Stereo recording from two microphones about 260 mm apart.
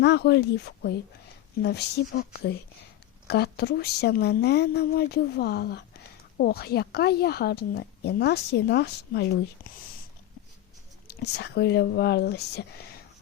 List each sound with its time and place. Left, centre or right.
0.0 s speech: left
11.1 s speech: left